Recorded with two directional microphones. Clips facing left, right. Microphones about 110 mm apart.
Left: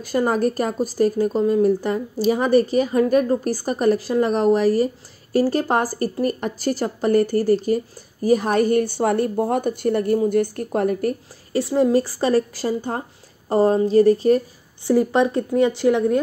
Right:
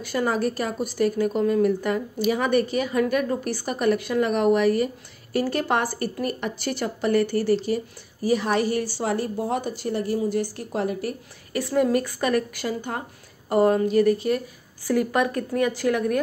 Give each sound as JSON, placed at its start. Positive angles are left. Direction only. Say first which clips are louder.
{"t": 0.0, "sound": "a woman's voice", "louder": "left 4 dB", "side_deg": 40}
{"t": 11.5, "sound": "speech", "louder": "left 4 dB", "side_deg": 25}